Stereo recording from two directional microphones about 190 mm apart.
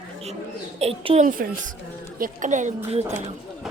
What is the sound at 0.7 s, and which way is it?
Speech, 30° right (ahead or behind).